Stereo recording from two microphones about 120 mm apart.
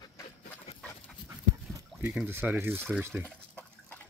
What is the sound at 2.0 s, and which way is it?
Speech, 15° right (ahead or behind).